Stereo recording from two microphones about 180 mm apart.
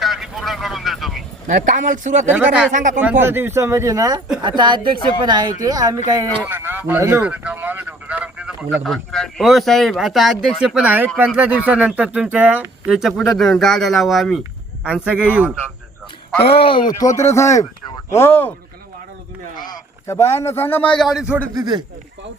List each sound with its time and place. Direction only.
0.0 s vehicle: centre (ahead or behind)
1.5 s speech: 45° right (ahead or behind)
2.3 s speech: 5° right (ahead or behind)
2.7 s speech: 45° right (ahead or behind)
3.0 s speech: 10° right (ahead or behind)
16.4 s a man's voice: 30° left (ahead or behind); by 18.5 s 10° left (ahead or behind)
20.1 s a man's voice: 15° left (ahead or behind); by 21.4 s 5° right (ahead or behind)
21.5 s speech: 25° right (ahead or behind)